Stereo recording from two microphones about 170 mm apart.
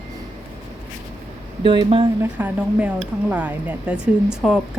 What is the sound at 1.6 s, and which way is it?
Speech, 30° right (ahead or behind).